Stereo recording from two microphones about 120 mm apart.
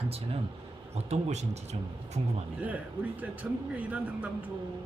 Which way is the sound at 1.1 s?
65° right (ahead or behind).